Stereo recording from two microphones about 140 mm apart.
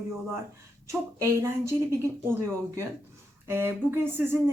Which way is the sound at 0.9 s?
20° right (ahead or behind).